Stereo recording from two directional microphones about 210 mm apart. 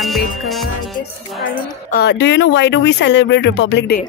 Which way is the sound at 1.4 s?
40° left (ahead or behind).